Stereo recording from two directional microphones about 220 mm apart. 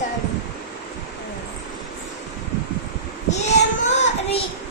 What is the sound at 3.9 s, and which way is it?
Child singing, 30° left (ahead or behind).